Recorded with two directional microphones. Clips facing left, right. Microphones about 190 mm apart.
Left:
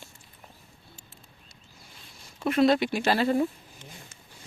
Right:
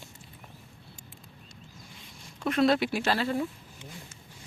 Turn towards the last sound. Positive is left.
turn(degrees=15)  # may be behind; listen again after turning